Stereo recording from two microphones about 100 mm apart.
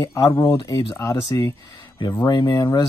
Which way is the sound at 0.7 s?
50° left (ahead or behind).